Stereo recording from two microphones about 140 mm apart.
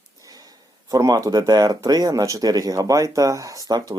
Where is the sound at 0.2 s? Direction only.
25° right (ahead or behind).